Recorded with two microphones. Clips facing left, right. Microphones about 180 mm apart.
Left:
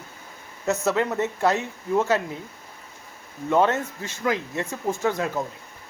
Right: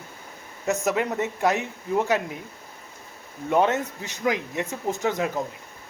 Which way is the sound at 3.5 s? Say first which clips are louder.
Left 1 dB; 20° right (ahead or behind).